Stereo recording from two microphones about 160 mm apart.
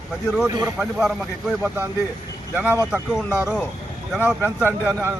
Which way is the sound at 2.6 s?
10° right (ahead or behind).